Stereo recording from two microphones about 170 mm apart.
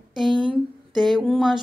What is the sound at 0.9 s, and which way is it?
Speech, centre (ahead or behind).